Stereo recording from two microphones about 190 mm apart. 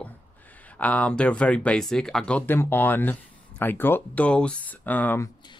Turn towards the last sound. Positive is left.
turn(degrees=10)  # may be behind; listen again after turning